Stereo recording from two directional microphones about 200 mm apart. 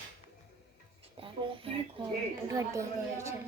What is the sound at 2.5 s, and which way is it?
Speech, 15° right (ahead or behind).